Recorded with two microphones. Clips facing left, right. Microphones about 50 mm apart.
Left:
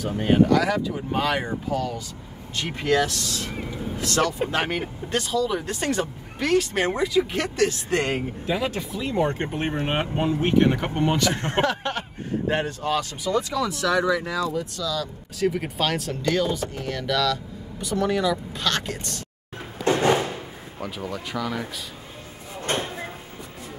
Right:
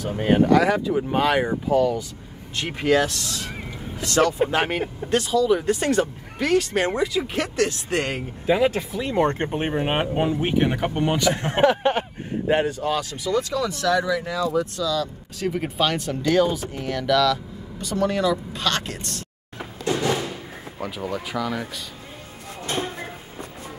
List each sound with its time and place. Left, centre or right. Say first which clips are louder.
0.5 s speech: right 3 dB; right; by 7.4 s centre
8.5 s speech: right 8 dB; centre
9.1 s speech: right 3 dB; right
9.5 s speech: right 2 dB; centre
11.6 s speech: right 11 dB; right
12.4 s speech: right 4 dB; centre
13.2 s speech: right 1 dB; centre
14.8 s speech: right 4 dB; centre
17.7 s speech: right 1 dB; centre
19.8 s music: left 3 dB; left
20.8 s speech: right 3 dB; centre